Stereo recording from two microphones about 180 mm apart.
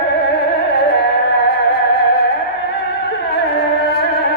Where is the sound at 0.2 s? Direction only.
65° left (ahead or behind).